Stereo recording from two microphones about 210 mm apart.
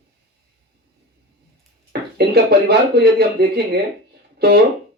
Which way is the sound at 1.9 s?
50° right (ahead or behind).